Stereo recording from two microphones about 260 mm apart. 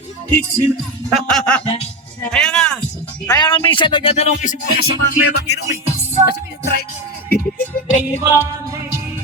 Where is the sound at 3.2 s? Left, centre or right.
Centre; by 5.6 s left.